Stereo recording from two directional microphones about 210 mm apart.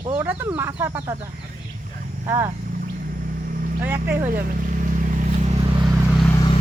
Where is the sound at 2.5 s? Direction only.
40° right (ahead or behind).